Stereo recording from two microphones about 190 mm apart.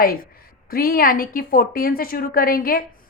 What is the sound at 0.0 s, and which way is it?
A woman's voice, 50° left (ahead or behind).